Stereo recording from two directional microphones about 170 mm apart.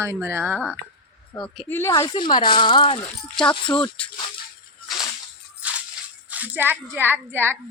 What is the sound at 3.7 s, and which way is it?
Speech, 5° left (ahead or behind).